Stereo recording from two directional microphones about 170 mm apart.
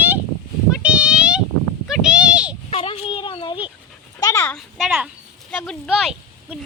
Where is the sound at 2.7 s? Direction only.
35° left (ahead or behind).